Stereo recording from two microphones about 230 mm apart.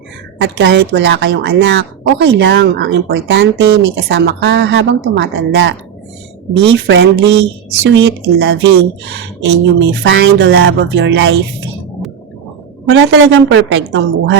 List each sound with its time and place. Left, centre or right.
0.4 s a woman's voice: right
10.6 s music: right
12.9 s a woman's voice: right